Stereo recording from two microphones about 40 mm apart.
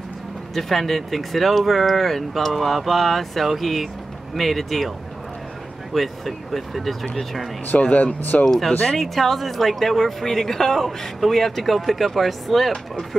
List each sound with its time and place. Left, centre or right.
0.6 s speech: centre
5.9 s speech: centre
7.8 s speech: left
8.5 s speech: centre